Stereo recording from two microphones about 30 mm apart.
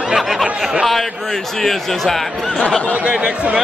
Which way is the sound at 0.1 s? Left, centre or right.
Centre.